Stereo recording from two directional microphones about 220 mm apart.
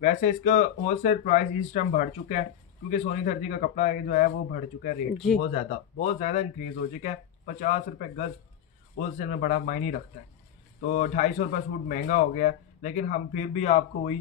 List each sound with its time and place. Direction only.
0.0 s a man's voice: 35° left (ahead or behind)
5.1 s speech: centre (ahead or behind)
5.5 s a man's voice: 30° left (ahead or behind)